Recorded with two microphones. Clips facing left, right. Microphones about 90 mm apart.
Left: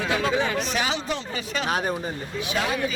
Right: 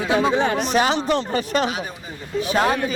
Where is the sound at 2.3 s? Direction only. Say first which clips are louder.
Right 8 dB; 40° right (ahead or behind).